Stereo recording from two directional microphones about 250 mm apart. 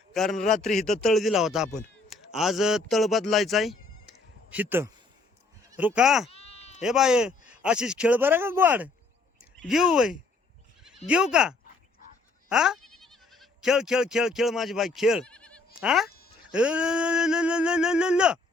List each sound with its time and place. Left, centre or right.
0.1 s a man's voice: centre
0.3 s a man's voice: left
0.6 s speech: centre
6.3 s bleat: left
6.8 s speech: centre
16.0 s a sound: left
16.5 s speech: centre